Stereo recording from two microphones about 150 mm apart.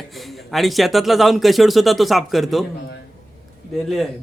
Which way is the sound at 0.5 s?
Centre (ahead or behind).